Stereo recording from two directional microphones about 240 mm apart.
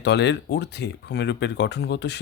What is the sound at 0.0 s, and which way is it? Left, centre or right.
Speech, left.